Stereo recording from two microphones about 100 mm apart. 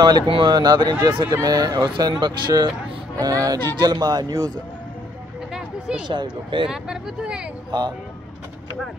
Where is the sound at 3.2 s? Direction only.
35° right (ahead or behind).